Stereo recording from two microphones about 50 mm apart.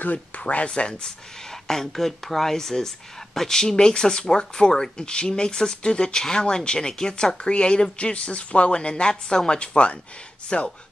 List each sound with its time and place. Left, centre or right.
0.0 s speech: left